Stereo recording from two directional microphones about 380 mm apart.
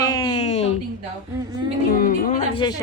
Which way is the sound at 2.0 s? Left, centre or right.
Left.